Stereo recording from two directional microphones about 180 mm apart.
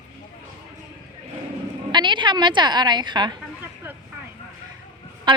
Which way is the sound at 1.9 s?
25° right (ahead or behind).